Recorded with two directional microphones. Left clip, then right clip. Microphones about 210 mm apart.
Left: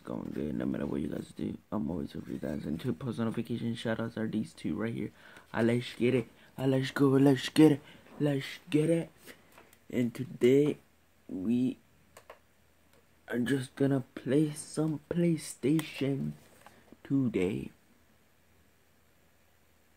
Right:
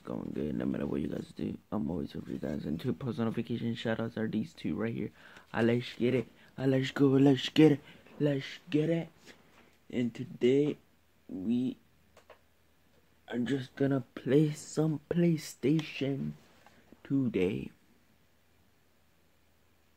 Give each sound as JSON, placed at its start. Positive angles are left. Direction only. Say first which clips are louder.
{"t": 0.0, "sound": "speech", "louder": "even", "side_deg": 5}
{"t": 13.2, "sound": "speech", "louder": "left 2 dB", "side_deg": 30}
{"t": 14.1, "sound": "speech", "louder": "right 2 dB", "side_deg": -5}
{"t": 15.8, "sound": "speech", "louder": "left 1 dB", "side_deg": 10}